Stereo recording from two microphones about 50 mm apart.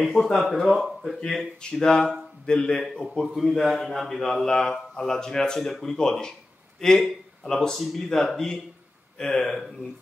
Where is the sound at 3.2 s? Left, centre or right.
Centre.